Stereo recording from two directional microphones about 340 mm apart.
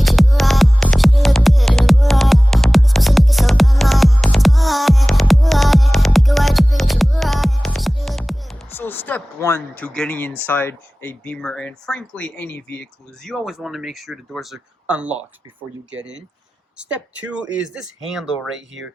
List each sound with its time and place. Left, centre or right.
0.0 s music: centre
10.4 s speech: centre
16.0 s speech: right
16.7 s speech: centre